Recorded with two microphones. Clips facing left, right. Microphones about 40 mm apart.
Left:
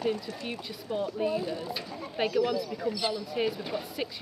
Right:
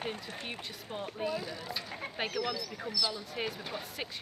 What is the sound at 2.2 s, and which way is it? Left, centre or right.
Speech, centre.